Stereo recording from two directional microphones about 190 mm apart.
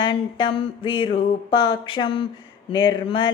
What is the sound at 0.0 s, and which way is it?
Mantra, 25° left (ahead or behind).